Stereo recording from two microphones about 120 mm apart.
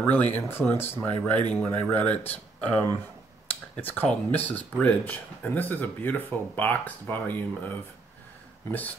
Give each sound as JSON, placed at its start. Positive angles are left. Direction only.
{"t": 0.0, "sound": "speech", "side_deg": 15}